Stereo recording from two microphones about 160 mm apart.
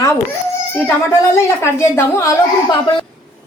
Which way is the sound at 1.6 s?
15° left (ahead or behind).